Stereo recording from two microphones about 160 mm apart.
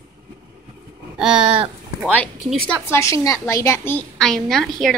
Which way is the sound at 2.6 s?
10° left (ahead or behind).